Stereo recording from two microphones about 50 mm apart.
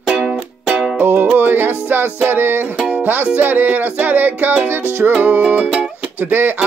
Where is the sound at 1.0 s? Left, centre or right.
Right.